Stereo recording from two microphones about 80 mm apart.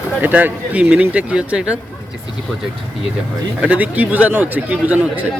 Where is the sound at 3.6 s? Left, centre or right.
Centre.